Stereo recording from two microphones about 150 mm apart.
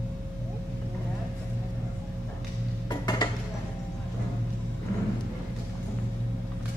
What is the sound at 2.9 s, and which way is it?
Dishes, 25° left (ahead or behind).